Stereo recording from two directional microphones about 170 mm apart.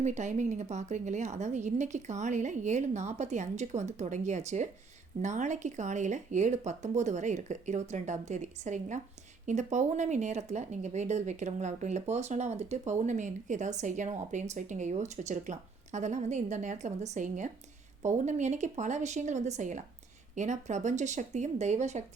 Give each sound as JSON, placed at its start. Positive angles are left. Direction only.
{"t": 0.0, "sound": "a woman's voice", "side_deg": -45}